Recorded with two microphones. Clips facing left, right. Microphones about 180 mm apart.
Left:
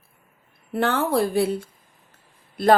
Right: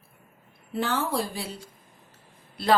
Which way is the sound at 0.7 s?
60° left (ahead or behind).